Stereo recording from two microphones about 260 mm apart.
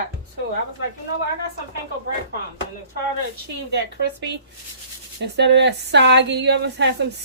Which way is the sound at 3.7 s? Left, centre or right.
Right.